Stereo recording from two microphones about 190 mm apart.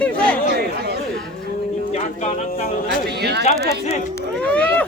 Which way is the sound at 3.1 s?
60° right (ahead or behind).